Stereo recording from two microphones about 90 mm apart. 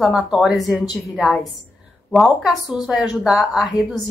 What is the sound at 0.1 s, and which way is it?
A woman's voice, 10° right (ahead or behind).